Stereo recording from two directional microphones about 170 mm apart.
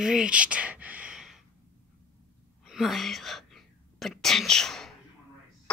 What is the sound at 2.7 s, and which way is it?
Whispering, centre (ahead or behind).